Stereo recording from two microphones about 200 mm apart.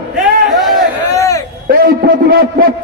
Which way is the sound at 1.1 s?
15° left (ahead or behind).